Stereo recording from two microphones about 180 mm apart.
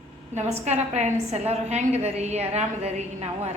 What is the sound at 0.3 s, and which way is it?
A woman's voice, 40° right (ahead or behind).